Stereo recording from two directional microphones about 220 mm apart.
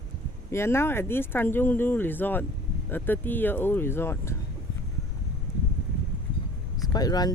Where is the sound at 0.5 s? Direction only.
10° left (ahead or behind).